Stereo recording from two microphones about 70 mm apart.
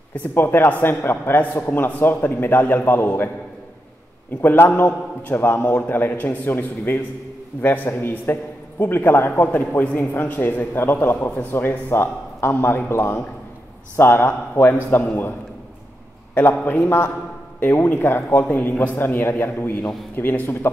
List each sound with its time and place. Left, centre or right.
0.1 s a man's voice: left
4.4 s a man's voice: left
16.3 s a man's voice: left